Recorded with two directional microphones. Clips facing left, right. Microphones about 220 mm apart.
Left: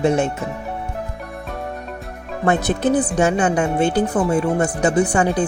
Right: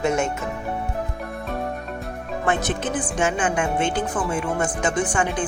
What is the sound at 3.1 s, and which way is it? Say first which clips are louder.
Speech: left 5 dB; 40° left (ahead or behind).